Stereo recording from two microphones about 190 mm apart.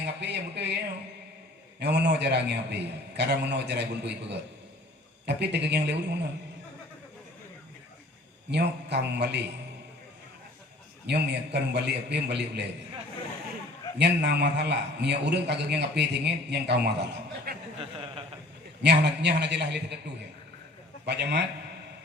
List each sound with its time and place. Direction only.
0.0 s a man's voice: 65° right (ahead or behind)
1.8 s a man's voice: 60° right (ahead or behind)
8.4 s a man's voice: 60° right (ahead or behind)
11.0 s a man's voice: 60° right (ahead or behind)
14.0 s a man's voice: 65° right (ahead or behind)
17.7 s a sound: 30° right (ahead or behind)
18.8 s a man's voice: 65° right (ahead or behind)
21.1 s a man's voice: 60° right (ahead or behind)